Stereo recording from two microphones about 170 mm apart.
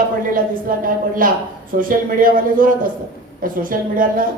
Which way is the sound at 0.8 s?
55° right (ahead or behind).